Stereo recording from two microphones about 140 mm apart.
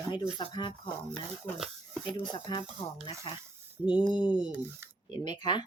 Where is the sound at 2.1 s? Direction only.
35° left (ahead or behind).